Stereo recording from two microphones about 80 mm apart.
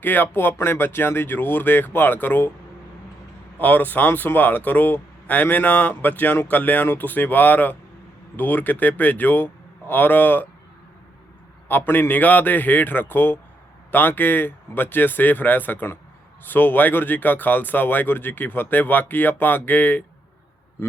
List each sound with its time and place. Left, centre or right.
0.0 s speech: left
3.6 s speech: left
11.7 s speech: left